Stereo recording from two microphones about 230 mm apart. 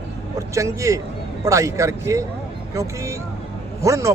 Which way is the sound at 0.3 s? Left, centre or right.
Centre.